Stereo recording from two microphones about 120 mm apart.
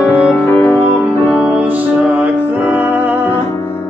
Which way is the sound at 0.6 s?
15° left (ahead or behind).